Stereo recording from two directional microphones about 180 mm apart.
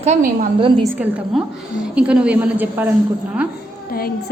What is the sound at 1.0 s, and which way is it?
A woman's voice, 10° right (ahead or behind).